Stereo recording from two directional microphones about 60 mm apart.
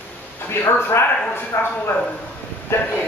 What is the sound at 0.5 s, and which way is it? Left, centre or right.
Speech, left.